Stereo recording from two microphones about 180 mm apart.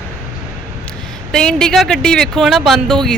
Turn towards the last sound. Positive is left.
turn(degrees=5)  # may be behind; listen again after turning